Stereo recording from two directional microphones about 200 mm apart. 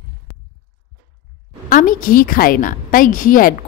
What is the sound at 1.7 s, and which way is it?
A woman's voice, 40° left (ahead or behind).